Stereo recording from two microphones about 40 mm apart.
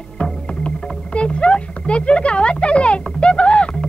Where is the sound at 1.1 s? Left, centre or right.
Left.